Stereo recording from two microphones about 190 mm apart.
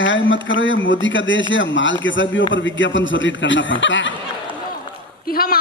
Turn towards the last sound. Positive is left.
turn(degrees=50)  # may be behind; listen again after turning